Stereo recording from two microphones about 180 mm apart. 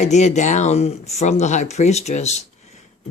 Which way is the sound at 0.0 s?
40° left (ahead or behind).